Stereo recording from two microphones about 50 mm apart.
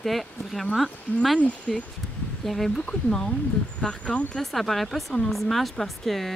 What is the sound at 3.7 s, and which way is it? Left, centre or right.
Speech, left.